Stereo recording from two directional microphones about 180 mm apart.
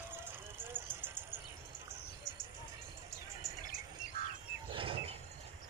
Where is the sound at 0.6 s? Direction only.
10° right (ahead or behind).